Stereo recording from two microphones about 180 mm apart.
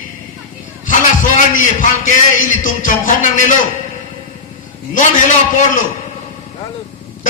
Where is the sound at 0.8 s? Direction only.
45° left (ahead or behind).